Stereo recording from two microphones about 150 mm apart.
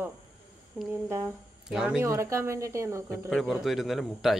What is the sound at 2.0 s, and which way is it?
Speech, 20° right (ahead or behind).